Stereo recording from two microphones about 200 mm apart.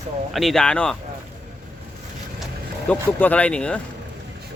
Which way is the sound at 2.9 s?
5° left (ahead or behind).